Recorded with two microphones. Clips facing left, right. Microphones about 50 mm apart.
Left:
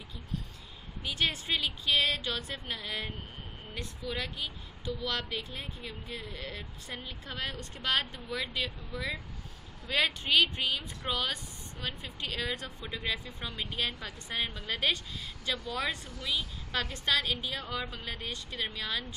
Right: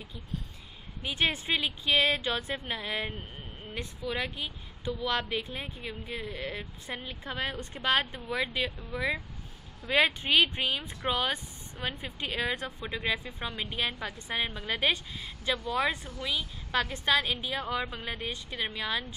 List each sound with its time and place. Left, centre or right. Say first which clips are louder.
1.0 s a woman's voice: right 3 dB; right